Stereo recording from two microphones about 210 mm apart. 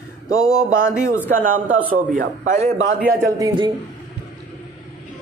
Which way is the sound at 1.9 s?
40° right (ahead or behind).